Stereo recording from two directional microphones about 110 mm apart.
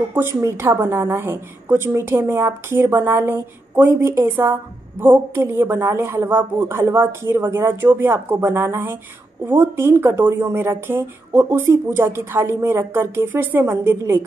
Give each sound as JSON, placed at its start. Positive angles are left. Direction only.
{"t": 0.1, "sound": "a woman's voice", "side_deg": -20}